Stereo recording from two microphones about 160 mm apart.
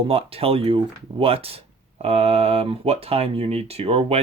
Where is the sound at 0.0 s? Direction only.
35° right (ahead or behind).